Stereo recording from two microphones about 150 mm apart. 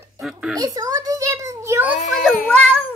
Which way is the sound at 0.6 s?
25° right (ahead or behind).